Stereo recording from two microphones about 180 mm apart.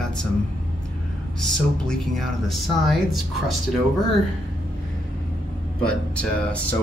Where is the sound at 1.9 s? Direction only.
Centre (ahead or behind).